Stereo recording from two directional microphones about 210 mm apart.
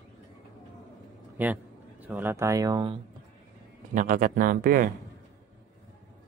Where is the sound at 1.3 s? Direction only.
10° right (ahead or behind).